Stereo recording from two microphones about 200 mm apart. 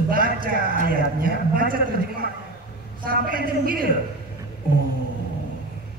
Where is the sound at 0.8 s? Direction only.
45° right (ahead or behind).